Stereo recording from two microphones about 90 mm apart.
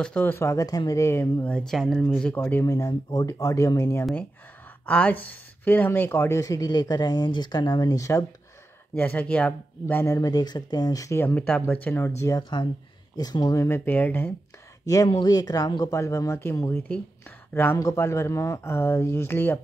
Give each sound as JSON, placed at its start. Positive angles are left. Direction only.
{"t": 0.0, "sound": "speech", "side_deg": 15}
{"t": 0.4, "sound": "speech", "side_deg": 35}
{"t": 1.4, "sound": "speech", "side_deg": 10}
{"t": 2.3, "sound": "speech", "side_deg": 20}
{"t": 2.6, "sound": "speech", "side_deg": 40}
{"t": 4.8, "sound": "speech", "side_deg": 15}
{"t": 8.9, "sound": "speech", "side_deg": 15}
{"t": 11.1, "sound": "speech", "side_deg": 25}
{"t": 12.4, "sound": "speech", "side_deg": 55}
{"t": 15.2, "sound": "speech", "side_deg": 45}